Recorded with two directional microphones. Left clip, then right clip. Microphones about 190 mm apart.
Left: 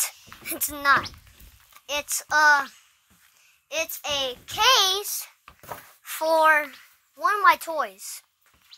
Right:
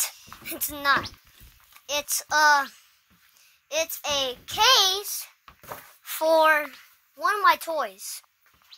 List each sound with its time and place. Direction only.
0.4 s a child's voice: 10° left (ahead or behind)
0.7 s a woman's voice: centre (ahead or behind)
3.6 s a child's voice: 15° right (ahead or behind)
5.0 s a child's voice: 20° left (ahead or behind)
6.0 s a woman's voice: 15° right (ahead or behind)
6.5 s a woman's voice: centre (ahead or behind)